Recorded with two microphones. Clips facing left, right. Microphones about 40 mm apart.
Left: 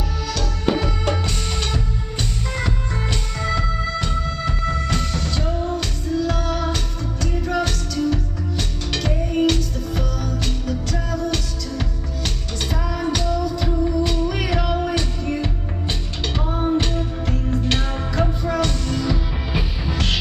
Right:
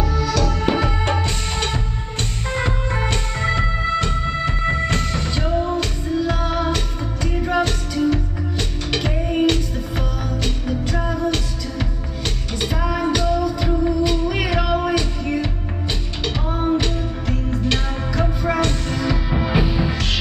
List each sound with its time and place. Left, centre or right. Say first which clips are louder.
0.8 s music: right 2 dB; right
12.8 s music: right 4 dB; centre
18.6 s music: right 1 dB; right